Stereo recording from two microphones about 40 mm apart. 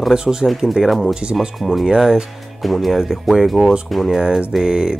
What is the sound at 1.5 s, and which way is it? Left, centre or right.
Speech, centre.